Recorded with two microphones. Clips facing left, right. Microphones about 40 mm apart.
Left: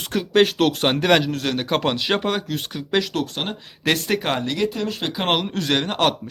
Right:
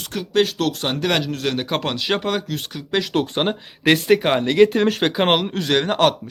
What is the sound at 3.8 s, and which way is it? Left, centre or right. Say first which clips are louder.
Speech: right 5 dB; centre.